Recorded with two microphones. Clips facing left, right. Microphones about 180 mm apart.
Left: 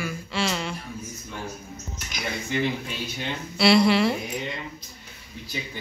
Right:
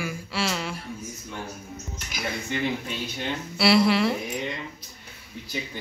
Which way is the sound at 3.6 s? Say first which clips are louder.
Left 2 dB; 5° right (ahead or behind).